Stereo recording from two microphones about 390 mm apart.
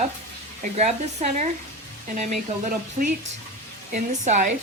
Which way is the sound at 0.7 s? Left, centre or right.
Centre.